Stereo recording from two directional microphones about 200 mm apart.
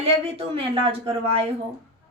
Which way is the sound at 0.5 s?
30° right (ahead or behind).